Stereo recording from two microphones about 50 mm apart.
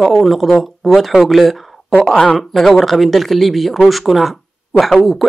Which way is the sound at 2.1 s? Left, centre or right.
Centre.